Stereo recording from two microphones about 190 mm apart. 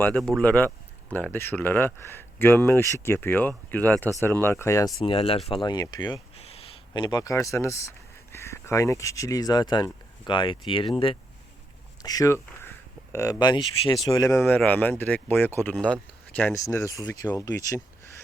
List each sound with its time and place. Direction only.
0.0 s speech: 10° left (ahead or behind)
4.9 s speech: 30° left (ahead or behind)
12.0 s speech: 20° left (ahead or behind)